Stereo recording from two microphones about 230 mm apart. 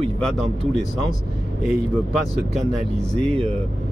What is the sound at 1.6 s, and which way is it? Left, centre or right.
Speech, centre.